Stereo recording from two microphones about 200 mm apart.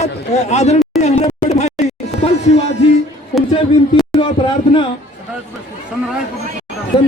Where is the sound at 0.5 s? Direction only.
35° left (ahead or behind).